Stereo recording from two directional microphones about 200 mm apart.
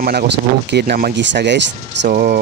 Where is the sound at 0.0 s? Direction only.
50° right (ahead or behind).